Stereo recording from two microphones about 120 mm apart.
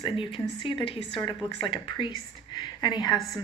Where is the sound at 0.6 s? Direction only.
45° left (ahead or behind).